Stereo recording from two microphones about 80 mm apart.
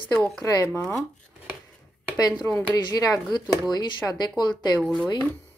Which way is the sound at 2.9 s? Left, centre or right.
Left.